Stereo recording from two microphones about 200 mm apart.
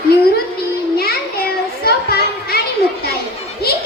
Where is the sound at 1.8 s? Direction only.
50° left (ahead or behind).